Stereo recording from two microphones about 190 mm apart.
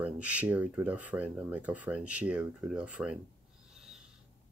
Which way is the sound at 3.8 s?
5° right (ahead or behind).